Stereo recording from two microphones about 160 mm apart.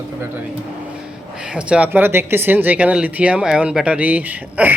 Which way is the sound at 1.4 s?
5° right (ahead or behind).